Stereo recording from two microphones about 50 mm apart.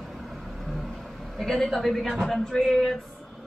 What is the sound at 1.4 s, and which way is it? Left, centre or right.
Speech, centre.